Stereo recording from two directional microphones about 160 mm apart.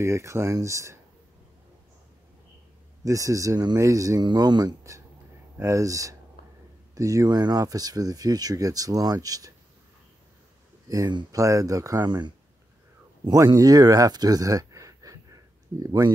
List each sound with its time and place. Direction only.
0.0 s speech: 20° right (ahead or behind)
3.0 s speech: 20° right (ahead or behind)
10.9 s speech: 25° right (ahead or behind)